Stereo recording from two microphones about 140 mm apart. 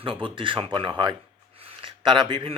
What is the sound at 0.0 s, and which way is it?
Speech, 40° right (ahead or behind).